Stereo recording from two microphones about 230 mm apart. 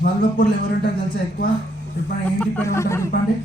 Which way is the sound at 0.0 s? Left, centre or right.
Left.